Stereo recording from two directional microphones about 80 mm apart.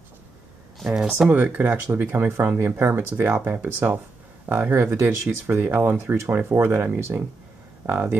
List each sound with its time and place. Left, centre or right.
0.7 s speech: centre
1.3 s speech: centre